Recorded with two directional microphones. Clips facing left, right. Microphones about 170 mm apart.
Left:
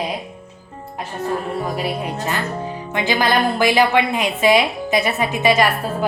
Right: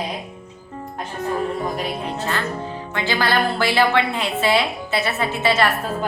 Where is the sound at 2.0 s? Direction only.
15° left (ahead or behind).